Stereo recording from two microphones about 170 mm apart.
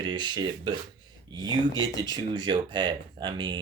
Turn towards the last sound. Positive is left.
turn(degrees=-30)  # may be behind; listen again after turning